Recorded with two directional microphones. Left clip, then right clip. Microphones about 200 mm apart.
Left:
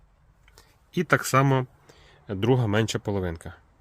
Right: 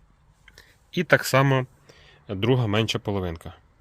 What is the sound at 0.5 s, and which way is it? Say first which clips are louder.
Speech: right 1 dB; 15° left (ahead or behind).